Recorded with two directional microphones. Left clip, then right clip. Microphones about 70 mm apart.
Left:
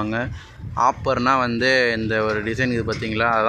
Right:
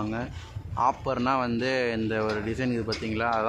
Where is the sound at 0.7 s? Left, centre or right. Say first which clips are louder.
Left 7 dB; left.